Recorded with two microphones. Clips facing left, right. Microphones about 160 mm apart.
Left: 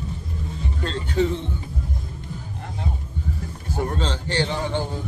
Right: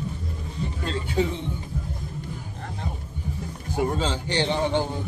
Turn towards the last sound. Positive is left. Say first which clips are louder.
# right 1 dB
turn(degrees=-15)  # may be behind; listen again after turning